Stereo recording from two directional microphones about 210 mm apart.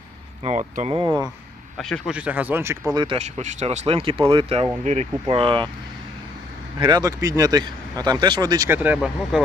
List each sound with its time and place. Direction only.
0.4 s speech: 30° right (ahead or behind)
1.8 s speech: centre (ahead or behind)
2.9 s speech: 25° right (ahead or behind)
6.7 s speech: 20° right (ahead or behind)